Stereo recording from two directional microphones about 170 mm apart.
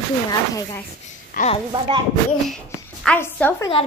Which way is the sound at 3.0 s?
10° left (ahead or behind).